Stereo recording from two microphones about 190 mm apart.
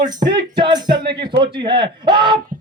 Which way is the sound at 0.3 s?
25° right (ahead or behind).